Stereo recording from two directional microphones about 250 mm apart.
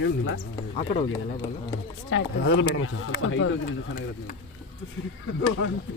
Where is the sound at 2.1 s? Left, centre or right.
Left.